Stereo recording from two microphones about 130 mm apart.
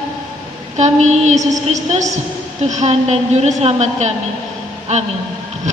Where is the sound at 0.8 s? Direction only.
65° right (ahead or behind).